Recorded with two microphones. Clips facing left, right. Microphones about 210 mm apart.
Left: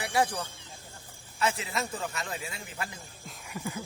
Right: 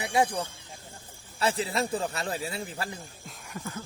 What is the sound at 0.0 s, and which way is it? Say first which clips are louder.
Speech: right 2 dB; 20° right (ahead or behind).